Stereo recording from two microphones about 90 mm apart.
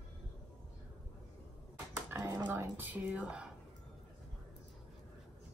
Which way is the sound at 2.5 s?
20° right (ahead or behind).